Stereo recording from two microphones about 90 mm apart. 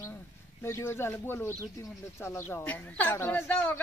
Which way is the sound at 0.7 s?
30° left (ahead or behind).